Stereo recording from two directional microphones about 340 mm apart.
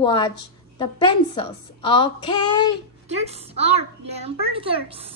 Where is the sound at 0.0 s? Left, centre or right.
Centre.